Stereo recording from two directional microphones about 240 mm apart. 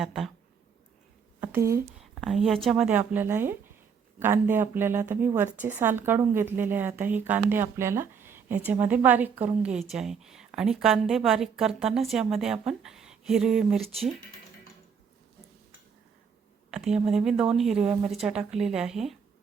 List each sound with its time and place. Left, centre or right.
0.0 s a woman's voice: centre
1.4 s a sound: centre
2.2 s a woman's voice: centre
16.7 s a woman's voice: centre